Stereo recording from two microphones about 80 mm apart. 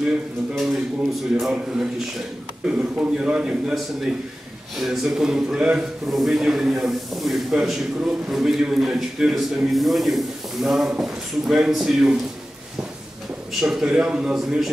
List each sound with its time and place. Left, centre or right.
0.6 s a man's voice: centre
4.7 s a man's voice: centre
13.5 s a man's voice: centre